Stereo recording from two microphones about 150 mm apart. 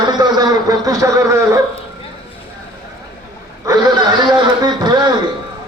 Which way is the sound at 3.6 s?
25° right (ahead or behind).